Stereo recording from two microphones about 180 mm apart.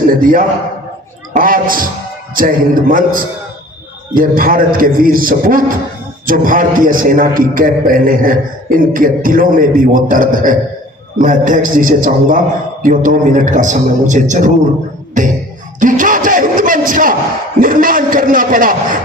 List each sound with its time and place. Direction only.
0.1 s a man's voice: 50° right (ahead or behind)
15.8 s a sound: 45° right (ahead or behind)
17.6 s a man's voice: 50° right (ahead or behind)